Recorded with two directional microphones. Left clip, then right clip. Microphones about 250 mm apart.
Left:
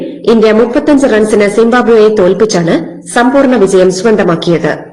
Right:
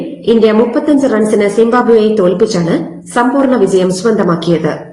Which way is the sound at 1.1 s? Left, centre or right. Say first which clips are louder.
Left 3 dB; left.